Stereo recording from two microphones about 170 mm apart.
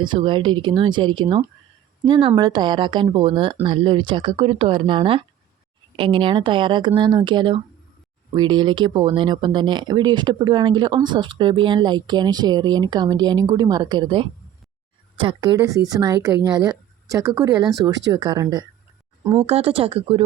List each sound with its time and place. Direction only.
0.0 s speech: 30° right (ahead or behind)
19.5 s speech: 35° right (ahead or behind)